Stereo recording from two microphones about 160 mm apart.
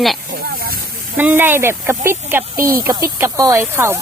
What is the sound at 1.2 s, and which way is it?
Speech, 10° right (ahead or behind).